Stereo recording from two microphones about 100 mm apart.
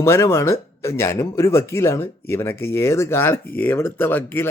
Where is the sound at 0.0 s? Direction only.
25° left (ahead or behind).